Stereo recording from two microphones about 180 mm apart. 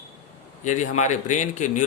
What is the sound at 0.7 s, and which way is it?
A man's voice, 40° left (ahead or behind).